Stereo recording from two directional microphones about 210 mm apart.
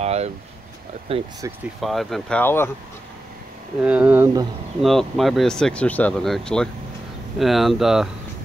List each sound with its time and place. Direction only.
0.0 s speech: 30° right (ahead or behind)
1.8 s speech: centre (ahead or behind)
3.8 s speech: 5° right (ahead or behind)
4.8 s speech: centre (ahead or behind)